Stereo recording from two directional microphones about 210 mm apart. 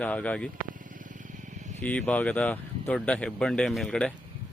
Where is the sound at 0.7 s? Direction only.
40° right (ahead or behind).